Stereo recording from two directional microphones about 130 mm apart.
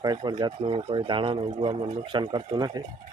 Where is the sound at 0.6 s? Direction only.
50° right (ahead or behind).